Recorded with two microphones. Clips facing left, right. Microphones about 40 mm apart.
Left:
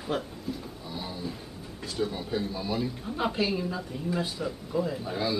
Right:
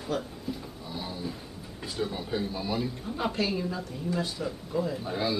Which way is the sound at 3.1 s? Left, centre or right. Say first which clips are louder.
Left 1 dB; centre.